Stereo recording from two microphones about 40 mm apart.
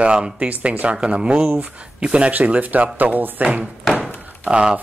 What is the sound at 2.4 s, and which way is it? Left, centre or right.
Speech, right.